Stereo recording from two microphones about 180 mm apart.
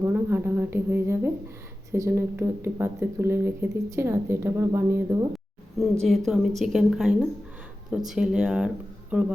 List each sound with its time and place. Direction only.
0.0 s speech: 10° right (ahead or behind)
6.0 s a woman's voice: centre (ahead or behind)